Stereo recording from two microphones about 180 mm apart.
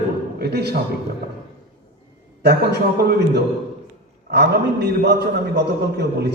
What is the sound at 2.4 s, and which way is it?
A man's voice, 65° right (ahead or behind).